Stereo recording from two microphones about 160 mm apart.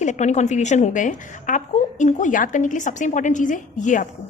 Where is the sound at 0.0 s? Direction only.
50° left (ahead or behind).